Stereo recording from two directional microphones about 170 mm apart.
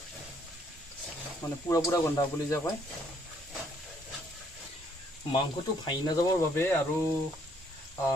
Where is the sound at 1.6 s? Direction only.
15° left (ahead or behind).